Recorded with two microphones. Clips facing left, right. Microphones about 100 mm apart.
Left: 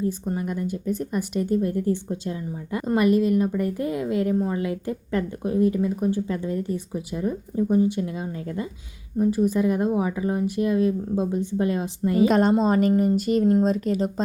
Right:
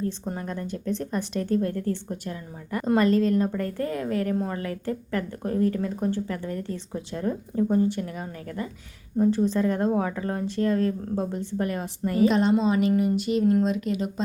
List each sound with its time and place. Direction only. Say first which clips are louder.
0.3 s speech: left 4 dB; 10° left (ahead or behind)
2.8 s speech: left 1 dB; 10° left (ahead or behind)
9.2 s a woman's voice: left 1 dB; 10° left (ahead or behind)
12.3 s a woman's voice: left 3 dB; 45° left (ahead or behind)
13.4 s a woman's voice: left 1 dB; 25° left (ahead or behind)
13.7 s speech: left 4 dB; 40° left (ahead or behind)